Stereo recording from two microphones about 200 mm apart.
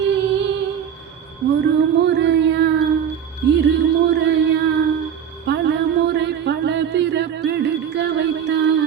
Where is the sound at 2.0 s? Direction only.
60° right (ahead or behind).